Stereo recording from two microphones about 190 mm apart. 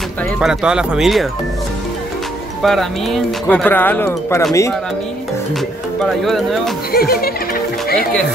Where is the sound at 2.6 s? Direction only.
Centre (ahead or behind).